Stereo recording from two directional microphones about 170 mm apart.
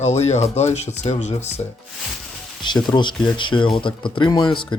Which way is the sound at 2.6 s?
25° left (ahead or behind).